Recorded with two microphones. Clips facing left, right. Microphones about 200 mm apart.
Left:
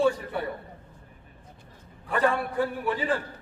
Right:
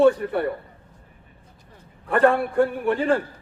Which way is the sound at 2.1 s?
60° right (ahead or behind).